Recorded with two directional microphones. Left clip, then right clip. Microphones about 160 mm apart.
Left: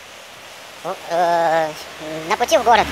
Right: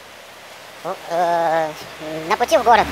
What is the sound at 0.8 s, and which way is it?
Speech, 5° left (ahead or behind).